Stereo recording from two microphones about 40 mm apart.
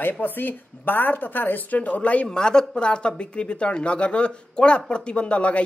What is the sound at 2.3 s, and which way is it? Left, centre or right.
Speech, centre.